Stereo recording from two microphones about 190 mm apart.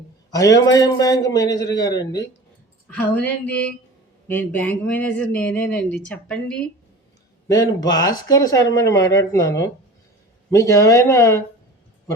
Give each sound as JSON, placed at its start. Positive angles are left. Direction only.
{"t": 0.3, "sound": "a man's voice", "side_deg": 20}
{"t": 3.2, "sound": "speech", "side_deg": 5}
{"t": 7.4, "sound": "speech", "side_deg": 20}